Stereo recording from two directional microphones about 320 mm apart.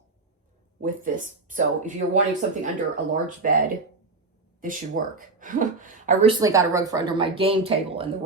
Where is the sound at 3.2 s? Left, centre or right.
Right.